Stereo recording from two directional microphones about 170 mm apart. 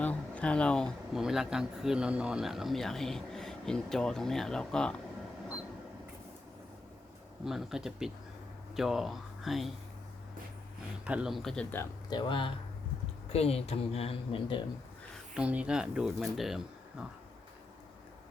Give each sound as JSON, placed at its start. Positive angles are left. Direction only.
{"t": 0.0, "sound": "speech", "side_deg": 10}
{"t": 7.4, "sound": "speech", "side_deg": -5}
{"t": 11.0, "sound": "speech", "side_deg": -5}
{"t": 12.0, "sound": "speech", "side_deg": 25}
{"t": 15.4, "sound": "speech", "side_deg": -5}